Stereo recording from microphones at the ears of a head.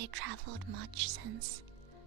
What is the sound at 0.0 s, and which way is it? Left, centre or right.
Speech, right.